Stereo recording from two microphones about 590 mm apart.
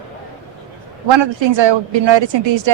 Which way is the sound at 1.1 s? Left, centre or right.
Right.